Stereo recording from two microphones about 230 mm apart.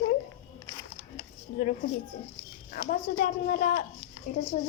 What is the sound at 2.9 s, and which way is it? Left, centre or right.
A woman's voice, left.